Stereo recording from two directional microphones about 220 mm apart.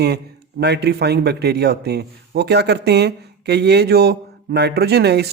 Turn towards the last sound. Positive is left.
turn(degrees=-50)  # may be behind; listen again after turning